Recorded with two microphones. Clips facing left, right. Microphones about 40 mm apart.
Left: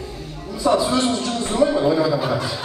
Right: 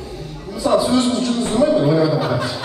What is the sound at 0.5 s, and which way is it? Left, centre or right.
A man's voice, centre.